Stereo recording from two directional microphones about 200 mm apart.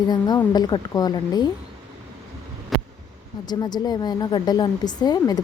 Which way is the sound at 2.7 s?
Centre (ahead or behind).